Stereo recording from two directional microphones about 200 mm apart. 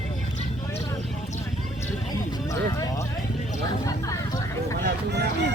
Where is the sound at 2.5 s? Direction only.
15° left (ahead or behind).